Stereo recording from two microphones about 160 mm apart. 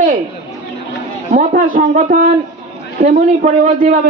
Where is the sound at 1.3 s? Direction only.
55° right (ahead or behind).